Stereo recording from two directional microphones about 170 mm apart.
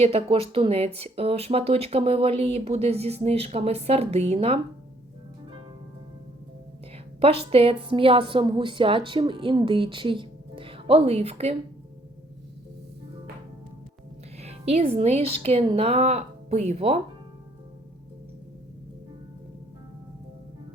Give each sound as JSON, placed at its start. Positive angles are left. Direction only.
{"t": 0.0, "sound": "a woman's voice", "side_deg": -35}
{"t": 7.2, "sound": "a woman's voice", "side_deg": -35}
{"t": 14.3, "sound": "a woman's voice", "side_deg": -40}